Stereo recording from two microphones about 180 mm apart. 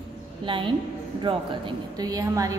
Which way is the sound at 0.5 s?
30° right (ahead or behind).